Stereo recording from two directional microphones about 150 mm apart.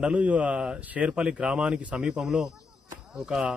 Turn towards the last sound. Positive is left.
turn(degrees=-5)  # may be behind; listen again after turning